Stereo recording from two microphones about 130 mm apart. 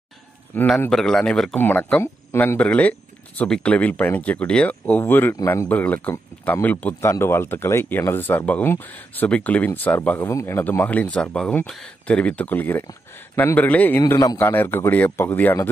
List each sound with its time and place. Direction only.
0.7 s a man's voice: 5° left (ahead or behind)